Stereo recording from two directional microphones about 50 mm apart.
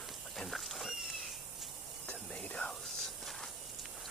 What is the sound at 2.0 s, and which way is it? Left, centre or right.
Whispering, left.